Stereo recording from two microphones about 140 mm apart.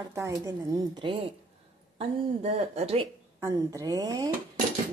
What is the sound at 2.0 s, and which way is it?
A woman's voice, 50° right (ahead or behind).